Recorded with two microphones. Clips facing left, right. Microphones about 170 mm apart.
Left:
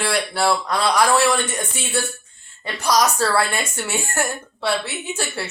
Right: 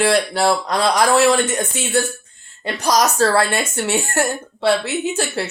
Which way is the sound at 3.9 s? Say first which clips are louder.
Right 4 dB; 20° right (ahead or behind).